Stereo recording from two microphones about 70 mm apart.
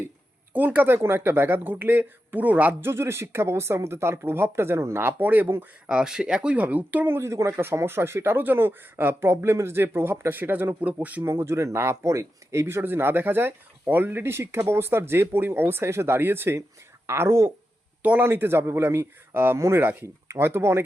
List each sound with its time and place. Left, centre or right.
0.5 s speech: right
2.8 s speech: right
5.9 s speech: centre
11.2 s speech: right
18.0 s a man's voice: right
18.3 s speech: right